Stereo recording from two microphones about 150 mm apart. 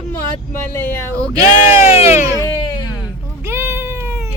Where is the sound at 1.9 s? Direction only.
40° left (ahead or behind).